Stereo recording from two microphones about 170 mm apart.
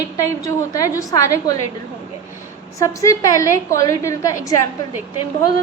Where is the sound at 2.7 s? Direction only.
20° left (ahead or behind).